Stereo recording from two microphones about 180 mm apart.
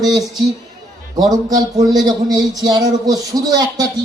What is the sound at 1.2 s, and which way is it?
Speech, 20° right (ahead or behind).